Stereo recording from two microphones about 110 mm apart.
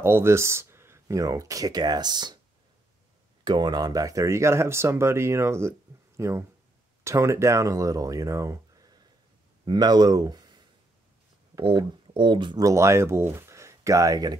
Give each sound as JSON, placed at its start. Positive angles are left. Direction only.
{"t": 0.0, "sound": "speech", "side_deg": -25}
{"t": 3.4, "sound": "speech", "side_deg": -40}
{"t": 11.6, "sound": "speech", "side_deg": -45}
{"t": 12.6, "sound": "speech", "side_deg": -25}
{"t": 13.3, "sound": "a sound", "side_deg": -25}